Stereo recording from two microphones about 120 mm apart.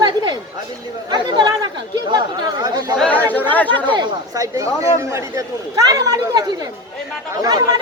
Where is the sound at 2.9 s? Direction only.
10° left (ahead or behind).